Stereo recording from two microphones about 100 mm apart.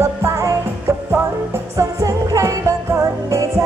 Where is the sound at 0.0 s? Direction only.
30° right (ahead or behind).